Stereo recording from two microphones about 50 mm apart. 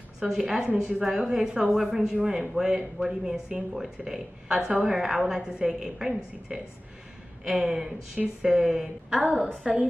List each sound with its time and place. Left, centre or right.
0.2 s speech: centre
9.2 s a woman's voice: right